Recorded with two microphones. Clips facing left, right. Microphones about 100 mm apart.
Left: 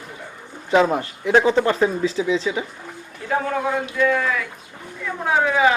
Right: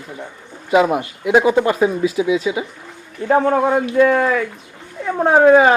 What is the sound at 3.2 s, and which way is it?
A woman's voice, 45° right (ahead or behind).